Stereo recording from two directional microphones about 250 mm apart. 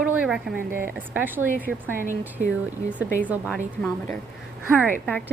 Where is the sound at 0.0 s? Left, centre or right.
Centre.